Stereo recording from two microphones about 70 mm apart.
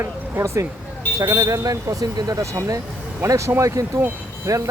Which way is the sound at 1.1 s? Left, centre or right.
Right.